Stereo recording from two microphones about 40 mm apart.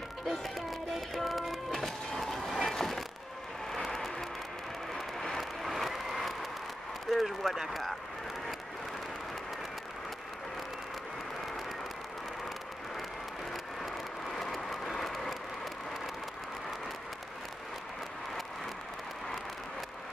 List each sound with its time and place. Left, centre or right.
0.3 s music: centre
2.0 s train: centre
2.7 s a sound: centre
3.7 s vehicle: centre
4.9 s a sound: centre
14.3 s vehicle: centre